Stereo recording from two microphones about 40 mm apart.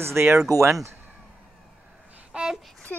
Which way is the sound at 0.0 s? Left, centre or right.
Right.